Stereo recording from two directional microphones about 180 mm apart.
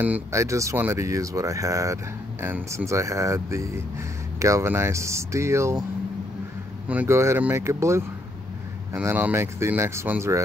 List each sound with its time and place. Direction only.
0.0 s speech: 15° right (ahead or behind)
6.9 s speech: 10° right (ahead or behind)